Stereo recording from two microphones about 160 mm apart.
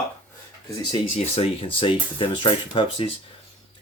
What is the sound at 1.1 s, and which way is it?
Speech, 35° left (ahead or behind).